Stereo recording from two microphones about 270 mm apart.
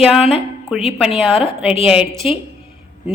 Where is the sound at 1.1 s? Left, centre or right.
Left.